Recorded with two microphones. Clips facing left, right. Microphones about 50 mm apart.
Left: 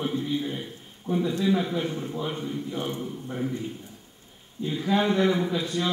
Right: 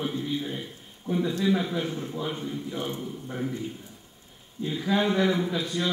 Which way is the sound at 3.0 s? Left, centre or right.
Centre.